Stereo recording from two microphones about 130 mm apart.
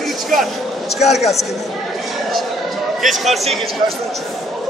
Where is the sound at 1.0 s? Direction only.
55° left (ahead or behind).